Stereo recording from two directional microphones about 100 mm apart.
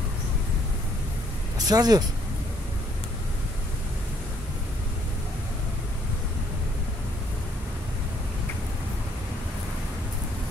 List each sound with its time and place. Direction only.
1.7 s speech: 40° right (ahead or behind)